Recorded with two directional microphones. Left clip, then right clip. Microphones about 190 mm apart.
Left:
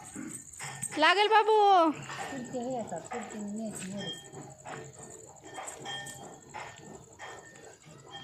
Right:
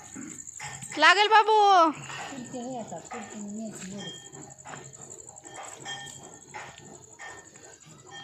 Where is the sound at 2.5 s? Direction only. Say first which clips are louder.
Left 2 dB; 20° right (ahead or behind).